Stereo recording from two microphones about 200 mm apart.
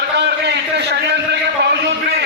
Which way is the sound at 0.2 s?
60° right (ahead or behind).